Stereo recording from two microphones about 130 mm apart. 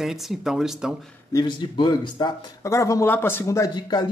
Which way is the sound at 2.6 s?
25° left (ahead or behind).